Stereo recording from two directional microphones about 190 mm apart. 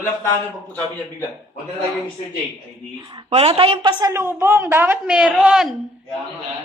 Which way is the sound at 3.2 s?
30° right (ahead or behind).